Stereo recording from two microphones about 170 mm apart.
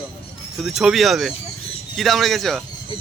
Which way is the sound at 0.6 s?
Centre (ahead or behind).